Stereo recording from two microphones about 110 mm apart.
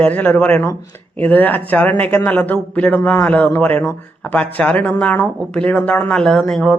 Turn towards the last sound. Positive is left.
turn(degrees=5)  # may be behind; listen again after turning